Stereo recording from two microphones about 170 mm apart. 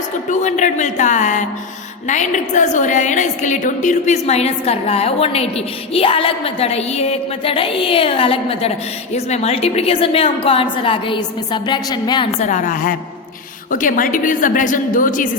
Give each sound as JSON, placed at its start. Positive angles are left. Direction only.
{"t": 0.3, "sound": "a woman's voice", "side_deg": 45}
{"t": 12.4, "sound": "a woman's voice", "side_deg": 45}